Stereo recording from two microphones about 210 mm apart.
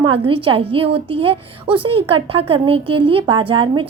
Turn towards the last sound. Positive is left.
turn(degrees=-25)  # may be behind; listen again after turning